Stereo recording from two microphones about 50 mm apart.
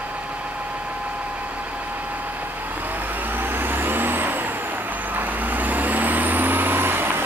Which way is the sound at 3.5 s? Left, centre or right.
Right.